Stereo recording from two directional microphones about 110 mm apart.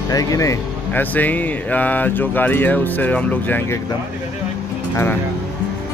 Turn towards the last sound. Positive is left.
turn(degrees=25)  # may be behind; listen again after turning